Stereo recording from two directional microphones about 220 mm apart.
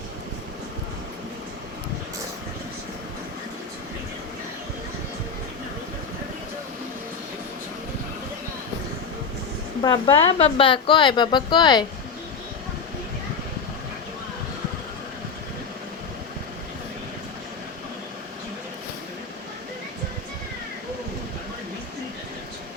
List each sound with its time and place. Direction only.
9.8 s a woman's voice: 20° left (ahead or behind)